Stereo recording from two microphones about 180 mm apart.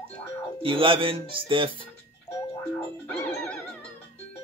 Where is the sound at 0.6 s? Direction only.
30° right (ahead or behind).